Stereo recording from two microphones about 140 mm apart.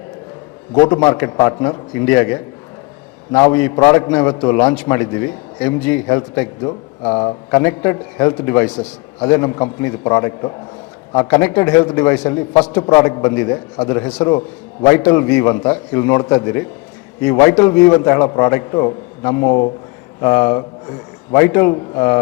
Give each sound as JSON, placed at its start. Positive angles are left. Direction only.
{"t": 0.9, "sound": "a man's voice", "side_deg": 20}
{"t": 6.6, "sound": "a man's voice", "side_deg": 30}
{"t": 7.6, "sound": "a man's voice", "side_deg": 15}